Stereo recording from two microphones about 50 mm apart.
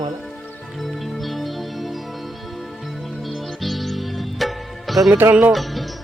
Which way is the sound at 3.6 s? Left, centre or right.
Centre.